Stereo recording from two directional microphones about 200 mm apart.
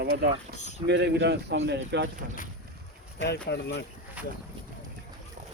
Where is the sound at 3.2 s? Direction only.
55° left (ahead or behind).